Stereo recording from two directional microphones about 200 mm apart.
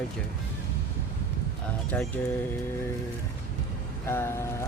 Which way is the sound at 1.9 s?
5° left (ahead or behind).